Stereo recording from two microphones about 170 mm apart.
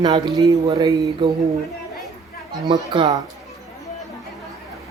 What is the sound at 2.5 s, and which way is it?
Speech, 25° right (ahead or behind).